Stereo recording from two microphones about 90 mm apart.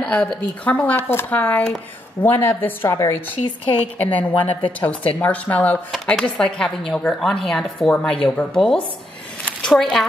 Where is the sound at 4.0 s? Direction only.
20° left (ahead or behind).